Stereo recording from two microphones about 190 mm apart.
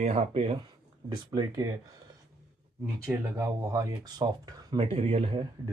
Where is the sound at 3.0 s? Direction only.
10° right (ahead or behind); by 5.4 s 30° right (ahead or behind).